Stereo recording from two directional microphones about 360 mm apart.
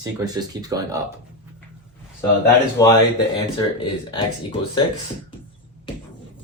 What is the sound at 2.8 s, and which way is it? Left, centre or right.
Speech, centre.